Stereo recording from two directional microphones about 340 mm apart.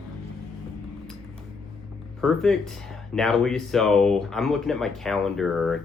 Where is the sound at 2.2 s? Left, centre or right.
Centre.